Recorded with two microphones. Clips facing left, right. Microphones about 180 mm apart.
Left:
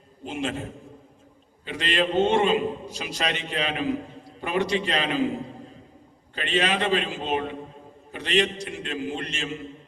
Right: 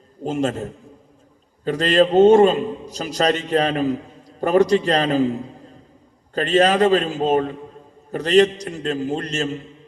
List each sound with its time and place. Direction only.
0.3 s a man's voice: 40° right (ahead or behind)
6.3 s a man's voice: 40° right (ahead or behind)